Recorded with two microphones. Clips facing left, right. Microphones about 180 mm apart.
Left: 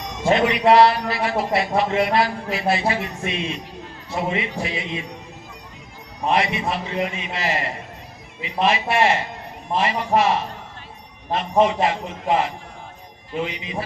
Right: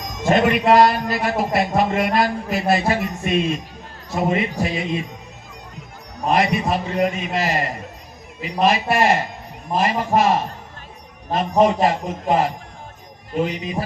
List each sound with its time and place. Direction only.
0.2 s a man's voice: 45° right (ahead or behind)
6.2 s a man's voice: 45° right (ahead or behind)